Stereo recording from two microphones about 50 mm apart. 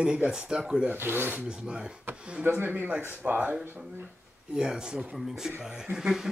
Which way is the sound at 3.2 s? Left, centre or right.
Right.